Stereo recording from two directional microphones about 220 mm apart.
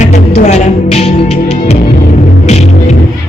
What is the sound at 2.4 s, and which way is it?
Music, 30° left (ahead or behind).